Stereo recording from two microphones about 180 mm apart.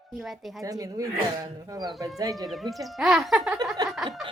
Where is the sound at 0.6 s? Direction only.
20° right (ahead or behind).